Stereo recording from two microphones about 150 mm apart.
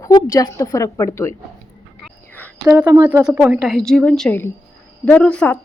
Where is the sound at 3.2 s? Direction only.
5° right (ahead or behind).